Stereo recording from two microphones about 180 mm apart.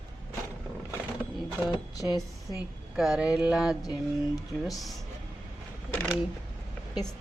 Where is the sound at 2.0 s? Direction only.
20° left (ahead or behind).